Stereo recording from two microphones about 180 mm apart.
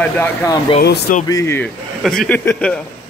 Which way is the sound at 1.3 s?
15° left (ahead or behind).